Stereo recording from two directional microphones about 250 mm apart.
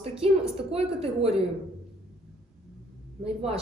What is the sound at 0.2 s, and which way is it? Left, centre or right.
A woman's voice, right.